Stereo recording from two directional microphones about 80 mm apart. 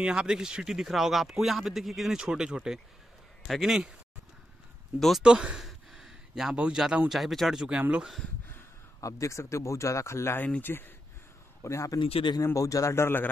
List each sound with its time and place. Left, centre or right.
0.0 s a man's voice: centre
5.2 s a man's voice: centre
5.7 s a sound: centre
7.1 s speech: centre
9.0 s speech: left
10.4 s speech: left
11.6 s a man's voice: left
12.0 s speech: left
12.5 s speech: left